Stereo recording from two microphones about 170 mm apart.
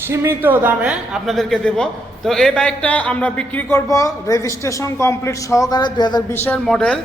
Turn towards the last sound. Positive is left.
turn(degrees=5)  # may be behind; listen again after turning